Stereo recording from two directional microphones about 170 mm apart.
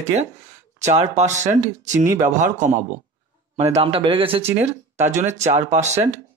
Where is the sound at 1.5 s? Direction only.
15° right (ahead or behind).